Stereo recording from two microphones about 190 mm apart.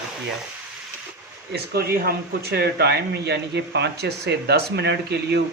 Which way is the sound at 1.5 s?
55° right (ahead or behind).